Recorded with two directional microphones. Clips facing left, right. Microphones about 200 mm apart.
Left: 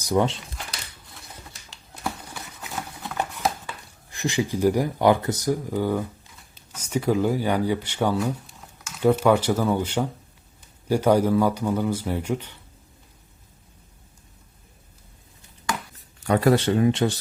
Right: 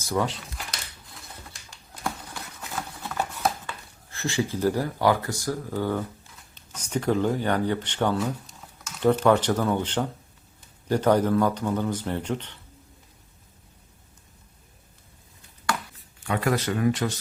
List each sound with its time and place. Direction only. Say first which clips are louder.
0.0 s speech: left 5 dB; 20° left (ahead or behind)
2.0 s a sound: left 1 dB; 5° left (ahead or behind)
3.7 s speech: even; 15° left (ahead or behind)
16.2 s speech: left 6 dB; 35° left (ahead or behind)